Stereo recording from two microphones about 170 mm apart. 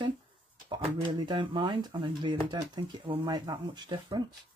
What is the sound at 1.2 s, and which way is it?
Speech, 30° right (ahead or behind).